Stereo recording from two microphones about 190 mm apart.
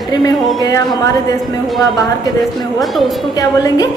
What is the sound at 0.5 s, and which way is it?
Speech, 20° left (ahead or behind).